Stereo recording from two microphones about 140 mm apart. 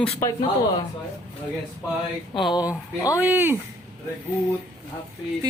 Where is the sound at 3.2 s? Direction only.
15° right (ahead or behind).